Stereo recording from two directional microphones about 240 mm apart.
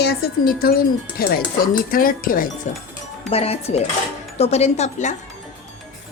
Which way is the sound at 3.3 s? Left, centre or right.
Left.